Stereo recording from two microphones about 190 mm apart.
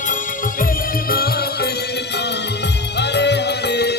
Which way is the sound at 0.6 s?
50° left (ahead or behind).